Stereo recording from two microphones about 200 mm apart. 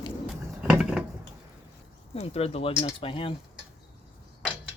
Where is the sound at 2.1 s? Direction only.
30° left (ahead or behind).